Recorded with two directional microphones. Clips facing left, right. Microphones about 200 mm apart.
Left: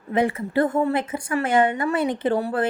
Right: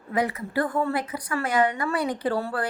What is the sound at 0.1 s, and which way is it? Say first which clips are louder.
A woman's voice: left 4 dB; 25° left (ahead or behind).